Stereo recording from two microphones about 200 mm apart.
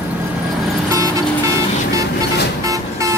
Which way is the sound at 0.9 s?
15° right (ahead or behind).